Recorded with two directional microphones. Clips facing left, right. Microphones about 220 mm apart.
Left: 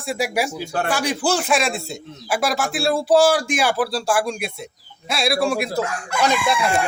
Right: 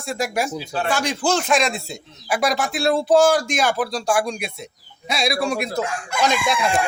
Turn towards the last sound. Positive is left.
turn(degrees=10)  # may be behind; listen again after turning